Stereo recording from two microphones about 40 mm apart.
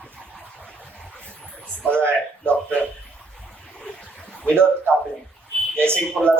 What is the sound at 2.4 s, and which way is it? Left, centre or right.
Speech, left.